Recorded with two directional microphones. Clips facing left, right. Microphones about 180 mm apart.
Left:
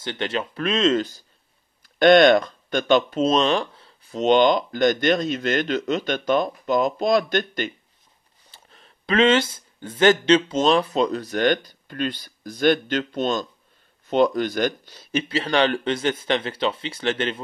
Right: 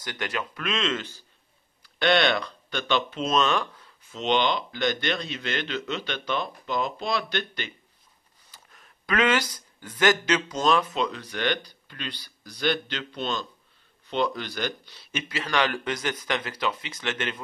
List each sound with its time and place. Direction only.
0.0 s speech: 25° left (ahead or behind); by 7.7 s 45° left (ahead or behind)
8.5 s speech: 30° left (ahead or behind)